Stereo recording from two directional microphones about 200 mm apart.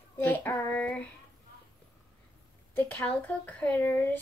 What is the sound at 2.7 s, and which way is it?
Speech, 10° left (ahead or behind).